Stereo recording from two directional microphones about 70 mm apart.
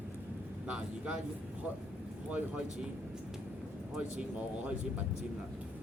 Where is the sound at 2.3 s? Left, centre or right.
Centre.